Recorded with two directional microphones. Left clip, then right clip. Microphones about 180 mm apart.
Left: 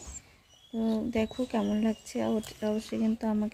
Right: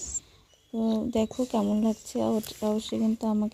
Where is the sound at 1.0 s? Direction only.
20° right (ahead or behind).